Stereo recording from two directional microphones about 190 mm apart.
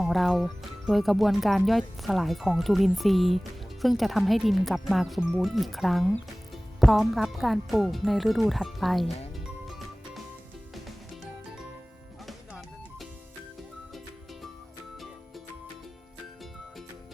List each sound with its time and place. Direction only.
0.0 s speech: centre (ahead or behind)
9.6 s music: centre (ahead or behind)
12.2 s music: centre (ahead or behind)